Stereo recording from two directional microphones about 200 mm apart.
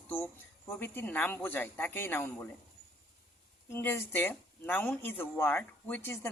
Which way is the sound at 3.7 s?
10° left (ahead or behind).